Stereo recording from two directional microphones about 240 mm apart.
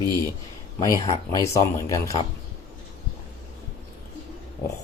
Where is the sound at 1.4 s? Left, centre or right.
Centre.